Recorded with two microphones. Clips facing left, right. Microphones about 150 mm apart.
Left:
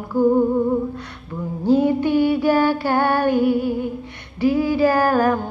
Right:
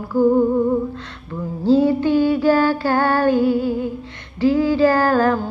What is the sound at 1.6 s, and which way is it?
Female singing, 15° left (ahead or behind).